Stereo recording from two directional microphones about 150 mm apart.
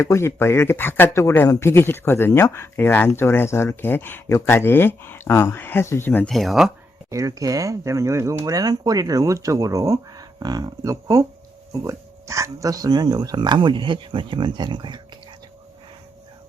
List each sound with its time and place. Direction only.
0.0 s speech: 20° left (ahead or behind)
6.3 s speech: centre (ahead or behind)
7.1 s speech: 20° right (ahead or behind)